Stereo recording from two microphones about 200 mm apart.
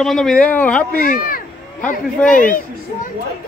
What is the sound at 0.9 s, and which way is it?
Speech, 45° left (ahead or behind).